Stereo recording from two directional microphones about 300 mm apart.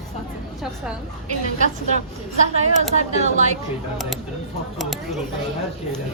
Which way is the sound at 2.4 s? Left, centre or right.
Right.